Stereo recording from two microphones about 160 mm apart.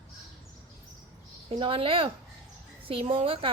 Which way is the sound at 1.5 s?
35° right (ahead or behind).